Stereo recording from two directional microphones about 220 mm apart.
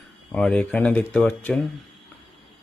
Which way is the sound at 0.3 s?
5° left (ahead or behind).